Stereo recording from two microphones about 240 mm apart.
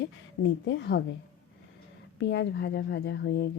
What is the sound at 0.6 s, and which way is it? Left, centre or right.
Speech, left.